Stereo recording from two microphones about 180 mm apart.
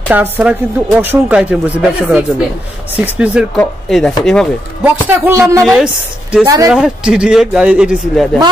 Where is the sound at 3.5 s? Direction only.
5° left (ahead or behind).